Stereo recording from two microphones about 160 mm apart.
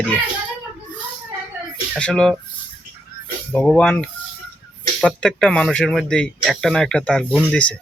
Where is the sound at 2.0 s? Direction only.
5° left (ahead or behind).